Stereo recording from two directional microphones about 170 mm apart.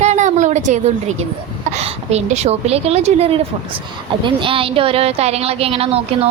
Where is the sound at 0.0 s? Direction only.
45° right (ahead or behind).